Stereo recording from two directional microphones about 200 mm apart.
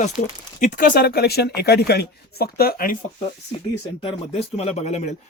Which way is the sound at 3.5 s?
25° left (ahead or behind).